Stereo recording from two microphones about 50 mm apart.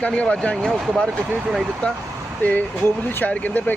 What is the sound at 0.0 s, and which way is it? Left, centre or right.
Speech, left.